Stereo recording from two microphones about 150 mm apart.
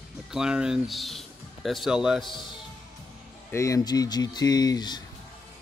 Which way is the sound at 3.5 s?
20° left (ahead or behind).